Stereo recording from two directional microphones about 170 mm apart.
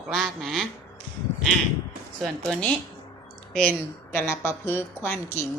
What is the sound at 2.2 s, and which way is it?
A woman's voice, 5° left (ahead or behind).